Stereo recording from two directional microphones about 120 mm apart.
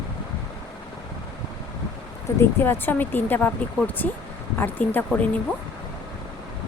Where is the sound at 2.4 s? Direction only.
20° left (ahead or behind).